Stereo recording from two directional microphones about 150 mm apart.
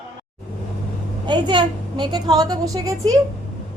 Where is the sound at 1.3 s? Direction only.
30° right (ahead or behind).